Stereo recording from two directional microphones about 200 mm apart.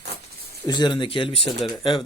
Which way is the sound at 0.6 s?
20° left (ahead or behind).